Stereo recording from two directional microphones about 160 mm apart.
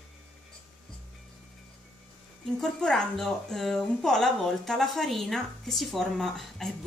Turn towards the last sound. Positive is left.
turn(degrees=0)  # may be behind; listen again after turning